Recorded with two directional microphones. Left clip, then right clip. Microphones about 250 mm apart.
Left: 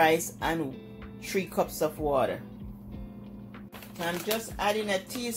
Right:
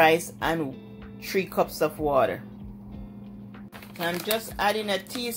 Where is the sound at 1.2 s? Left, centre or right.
Centre.